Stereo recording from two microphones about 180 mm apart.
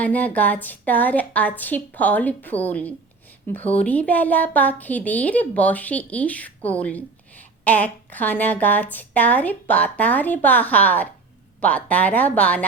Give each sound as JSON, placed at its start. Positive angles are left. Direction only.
{"t": 0.0, "sound": "a woman's voice", "side_deg": 10}